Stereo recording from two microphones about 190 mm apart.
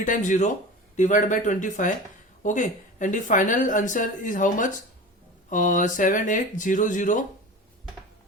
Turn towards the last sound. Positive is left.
turn(degrees=40)  # may be behind; listen again after turning